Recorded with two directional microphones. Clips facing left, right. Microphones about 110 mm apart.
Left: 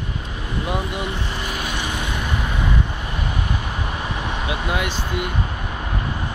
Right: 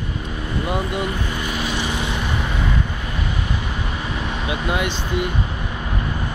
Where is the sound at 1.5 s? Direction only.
50° left (ahead or behind).